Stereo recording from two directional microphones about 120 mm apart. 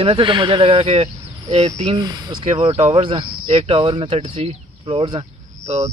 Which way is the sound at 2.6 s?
55° right (ahead or behind).